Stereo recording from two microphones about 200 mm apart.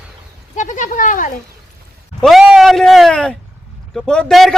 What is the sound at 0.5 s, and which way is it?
Speech, 35° left (ahead or behind).